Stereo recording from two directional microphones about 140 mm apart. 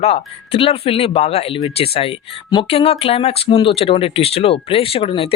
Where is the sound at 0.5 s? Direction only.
40° left (ahead or behind).